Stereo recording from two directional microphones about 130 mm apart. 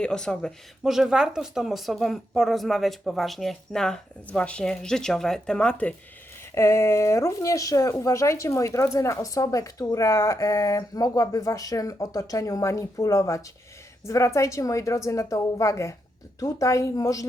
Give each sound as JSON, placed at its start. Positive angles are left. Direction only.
{"t": 0.0, "sound": "speech", "side_deg": 5}
{"t": 6.5, "sound": "speech", "side_deg": 20}